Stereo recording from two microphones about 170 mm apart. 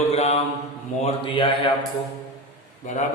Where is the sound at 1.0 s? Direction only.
30° left (ahead or behind).